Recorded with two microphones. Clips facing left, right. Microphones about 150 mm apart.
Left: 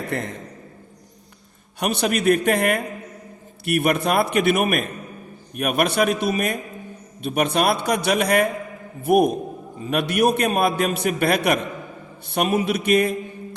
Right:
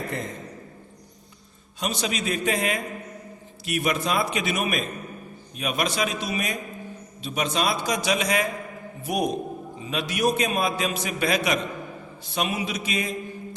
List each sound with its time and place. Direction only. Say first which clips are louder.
0.1 s a man's voice: left 7 dB; 70° left (ahead or behind)
1.8 s a man's voice: left 7 dB; 60° left (ahead or behind)